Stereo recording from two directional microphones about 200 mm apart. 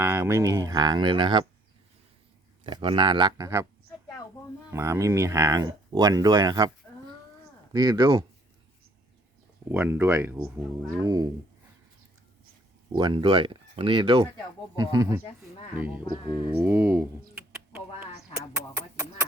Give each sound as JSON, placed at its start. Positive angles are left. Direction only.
{"t": 0.0, "sound": "speech", "side_deg": -10}
{"t": 2.6, "sound": "speech", "side_deg": -25}
{"t": 4.7, "sound": "speech", "side_deg": -15}
{"t": 7.7, "sound": "speech", "side_deg": -20}
{"t": 9.7, "sound": "speech", "side_deg": -10}
{"t": 13.0, "sound": "speech", "side_deg": -25}
{"t": 16.0, "sound": "speech", "side_deg": 20}
{"t": 16.6, "sound": "a sound", "side_deg": -10}